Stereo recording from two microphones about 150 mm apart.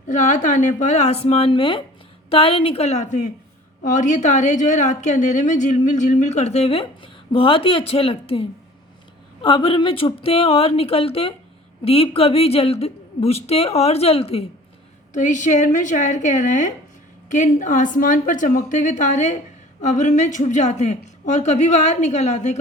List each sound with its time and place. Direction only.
0.1 s a woman's voice: 55° left (ahead or behind)
15.1 s a woman's voice: 55° left (ahead or behind)